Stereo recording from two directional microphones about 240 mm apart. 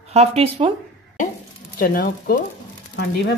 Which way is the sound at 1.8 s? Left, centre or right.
Left.